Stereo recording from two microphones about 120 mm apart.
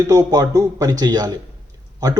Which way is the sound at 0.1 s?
30° right (ahead or behind).